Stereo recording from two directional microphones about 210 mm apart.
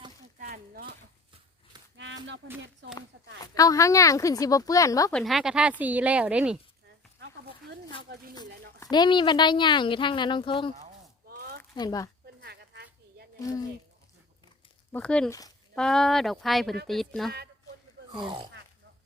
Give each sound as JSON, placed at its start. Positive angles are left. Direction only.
{"t": 0.3, "sound": "a sound", "side_deg": -40}
{"t": 2.0, "sound": "a sound", "side_deg": -60}
{"t": 3.4, "sound": "speech", "side_deg": 15}
{"t": 5.1, "sound": "a woman's voice", "side_deg": 0}
{"t": 8.8, "sound": "a woman's voice", "side_deg": 20}
{"t": 11.3, "sound": "a sound", "side_deg": -45}
{"t": 11.7, "sound": "speech", "side_deg": 20}
{"t": 12.4, "sound": "a sound", "side_deg": -50}
{"t": 14.9, "sound": "speech", "side_deg": 5}
{"t": 15.3, "sound": "speech", "side_deg": 15}
{"t": 15.7, "sound": "speech", "side_deg": 5}
{"t": 18.2, "sound": "speech", "side_deg": -25}